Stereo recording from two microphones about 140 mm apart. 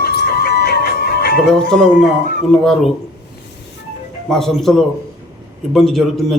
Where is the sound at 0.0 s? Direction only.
90° left.